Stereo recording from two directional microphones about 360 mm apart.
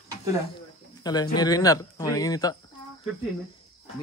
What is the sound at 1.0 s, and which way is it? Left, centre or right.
A man's voice, centre.